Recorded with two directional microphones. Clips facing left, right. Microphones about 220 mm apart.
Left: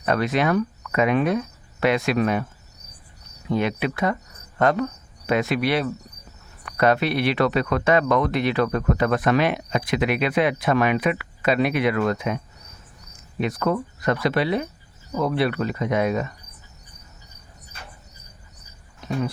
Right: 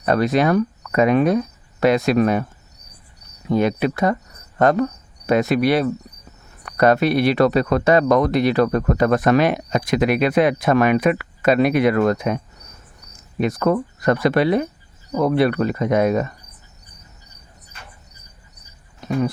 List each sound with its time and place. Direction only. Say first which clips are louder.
0.0 s cricket: right 4 dB; 40° right (ahead or behind)
3.5 s insect: right 5 dB; 40° right (ahead or behind)
6.7 s speech: right 4 dB; 45° right (ahead or behind)
13.4 s speech: right 5 dB; 45° right (ahead or behind)